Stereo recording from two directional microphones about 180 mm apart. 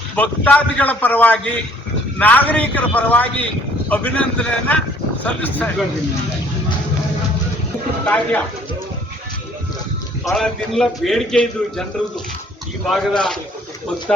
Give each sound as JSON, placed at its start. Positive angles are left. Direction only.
{"t": 0.2, "sound": "a man's voice", "side_deg": 10}
{"t": 8.0, "sound": "a man's voice", "side_deg": 10}
{"t": 10.3, "sound": "a man's voice", "side_deg": 0}
{"t": 12.9, "sound": "a man's voice", "side_deg": 5}